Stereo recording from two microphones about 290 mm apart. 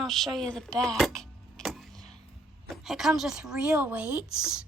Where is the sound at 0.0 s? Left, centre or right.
Centre.